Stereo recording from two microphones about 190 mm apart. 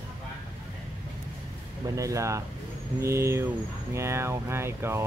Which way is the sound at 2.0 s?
15° right (ahead or behind).